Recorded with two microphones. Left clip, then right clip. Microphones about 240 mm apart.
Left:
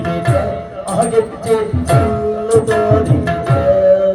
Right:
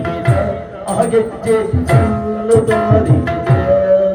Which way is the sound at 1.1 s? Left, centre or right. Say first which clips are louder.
Right 1 dB; left.